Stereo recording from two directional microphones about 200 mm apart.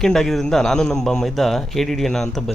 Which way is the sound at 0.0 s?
Centre (ahead or behind).